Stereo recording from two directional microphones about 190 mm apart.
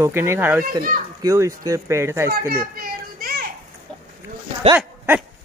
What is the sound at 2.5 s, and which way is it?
Children playing, 50° right (ahead or behind).